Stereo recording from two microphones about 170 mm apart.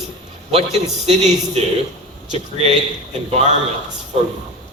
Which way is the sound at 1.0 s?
40° right (ahead or behind).